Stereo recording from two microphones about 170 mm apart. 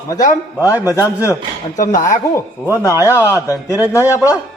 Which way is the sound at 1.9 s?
55° left (ahead or behind).